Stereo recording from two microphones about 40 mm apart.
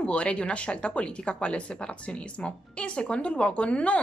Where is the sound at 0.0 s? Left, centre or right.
Left.